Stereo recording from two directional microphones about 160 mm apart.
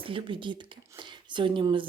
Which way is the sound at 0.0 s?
30° right (ahead or behind).